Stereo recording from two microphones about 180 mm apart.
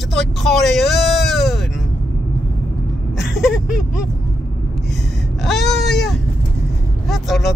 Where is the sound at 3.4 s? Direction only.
5° right (ahead or behind).